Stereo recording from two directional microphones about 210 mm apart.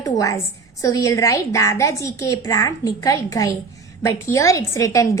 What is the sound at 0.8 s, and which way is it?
A woman's voice, 15° left (ahead or behind).